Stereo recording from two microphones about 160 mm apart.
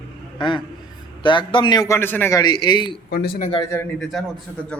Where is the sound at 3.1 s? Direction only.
70° left (ahead or behind).